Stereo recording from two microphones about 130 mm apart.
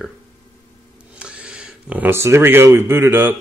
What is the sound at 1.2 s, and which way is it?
Speech, 10° right (ahead or behind).